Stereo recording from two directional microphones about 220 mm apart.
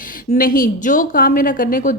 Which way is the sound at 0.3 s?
40° left (ahead or behind).